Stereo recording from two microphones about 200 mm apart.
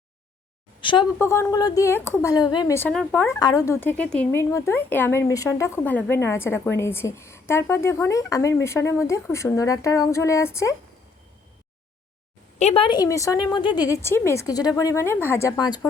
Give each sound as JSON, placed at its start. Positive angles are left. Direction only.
{"t": 0.8, "sound": "a woman's voice", "side_deg": 25}
{"t": 1.2, "sound": "speech", "side_deg": 15}
{"t": 12.5, "sound": "speech", "side_deg": 30}